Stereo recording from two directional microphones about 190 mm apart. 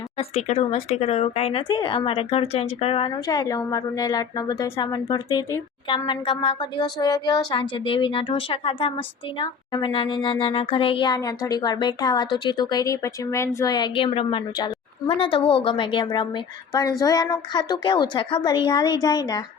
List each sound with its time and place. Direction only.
0.2 s speech: 35° left (ahead or behind)